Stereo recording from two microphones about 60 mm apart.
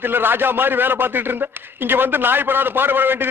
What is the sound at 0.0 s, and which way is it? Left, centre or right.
A man's voice, right.